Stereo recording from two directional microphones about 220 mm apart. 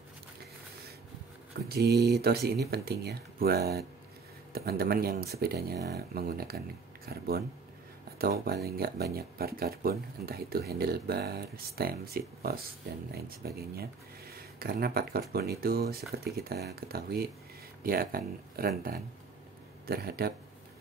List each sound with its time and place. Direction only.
1.7 s speech: 45° right (ahead or behind)